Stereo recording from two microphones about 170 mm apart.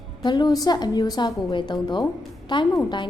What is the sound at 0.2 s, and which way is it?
A woman's voice, 25° left (ahead or behind).